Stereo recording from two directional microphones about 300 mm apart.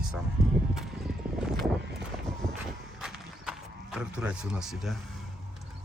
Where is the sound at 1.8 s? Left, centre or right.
Right.